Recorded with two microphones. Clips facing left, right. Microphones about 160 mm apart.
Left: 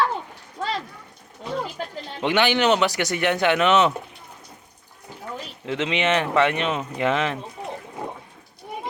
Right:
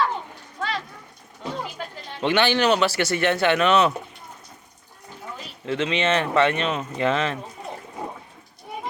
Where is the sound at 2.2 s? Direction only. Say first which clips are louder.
Even; 15° left (ahead or behind).